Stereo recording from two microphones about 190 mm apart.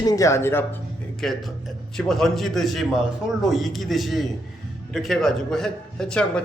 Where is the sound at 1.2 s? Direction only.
Centre (ahead or behind).